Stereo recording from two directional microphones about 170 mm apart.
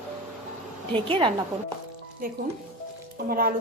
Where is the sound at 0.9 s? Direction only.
30° right (ahead or behind).